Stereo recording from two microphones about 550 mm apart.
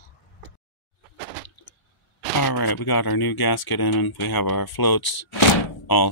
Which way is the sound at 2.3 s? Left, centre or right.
Left.